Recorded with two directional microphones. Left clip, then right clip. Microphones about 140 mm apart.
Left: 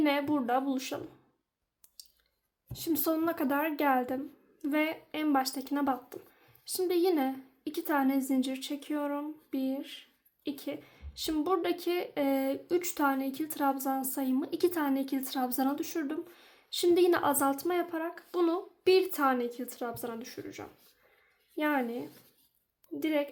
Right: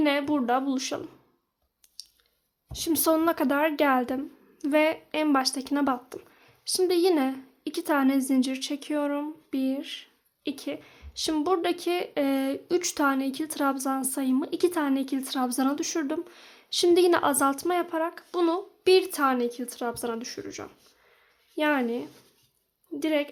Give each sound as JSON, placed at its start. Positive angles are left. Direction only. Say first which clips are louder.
{"t": 0.0, "sound": "a woman's voice", "louder": "right 4 dB", "side_deg": -30}
{"t": 2.7, "sound": "a woman's voice", "louder": "right 7 dB", "side_deg": -35}